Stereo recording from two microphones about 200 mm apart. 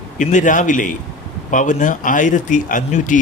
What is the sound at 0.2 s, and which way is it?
Speech, 40° left (ahead or behind).